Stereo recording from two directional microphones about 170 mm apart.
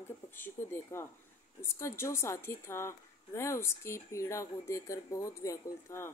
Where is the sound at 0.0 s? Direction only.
10° left (ahead or behind).